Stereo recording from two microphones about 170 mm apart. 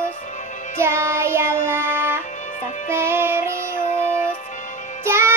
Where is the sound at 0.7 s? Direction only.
15° right (ahead or behind).